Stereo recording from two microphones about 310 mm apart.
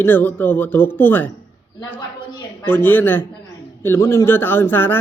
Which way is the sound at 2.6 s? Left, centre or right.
Centre.